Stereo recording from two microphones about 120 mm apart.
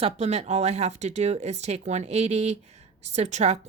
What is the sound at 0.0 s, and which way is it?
Speech, 65° right (ahead or behind).